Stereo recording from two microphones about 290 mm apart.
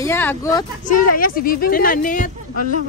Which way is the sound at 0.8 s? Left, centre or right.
Left.